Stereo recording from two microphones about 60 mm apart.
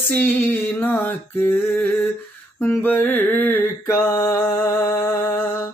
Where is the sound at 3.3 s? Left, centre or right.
Left.